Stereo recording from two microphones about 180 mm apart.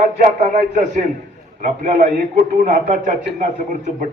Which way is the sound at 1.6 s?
50° right (ahead or behind).